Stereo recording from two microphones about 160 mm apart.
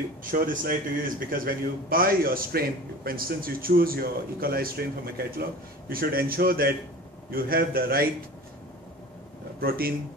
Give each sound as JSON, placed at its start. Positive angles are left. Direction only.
{"t": 0.2, "sound": "a man's voice", "side_deg": -60}
{"t": 9.6, "sound": "a man's voice", "side_deg": -70}